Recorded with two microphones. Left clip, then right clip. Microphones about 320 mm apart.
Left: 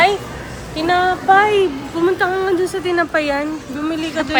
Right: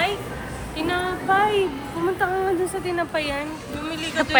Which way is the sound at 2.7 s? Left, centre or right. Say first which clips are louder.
Left 7 dB; left.